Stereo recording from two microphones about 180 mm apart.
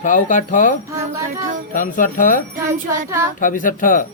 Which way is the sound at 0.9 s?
15° right (ahead or behind).